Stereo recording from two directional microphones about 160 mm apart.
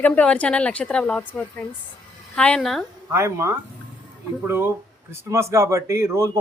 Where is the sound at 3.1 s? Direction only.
15° right (ahead or behind).